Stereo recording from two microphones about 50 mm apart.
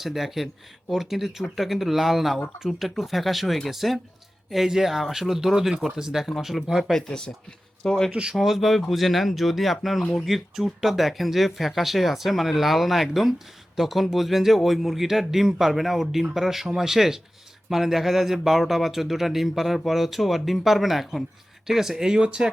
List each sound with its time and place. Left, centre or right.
0.0 s speech: centre
6.7 s speech: centre
7.8 s speech: centre
8.1 s speech: centre
8.4 s speech: centre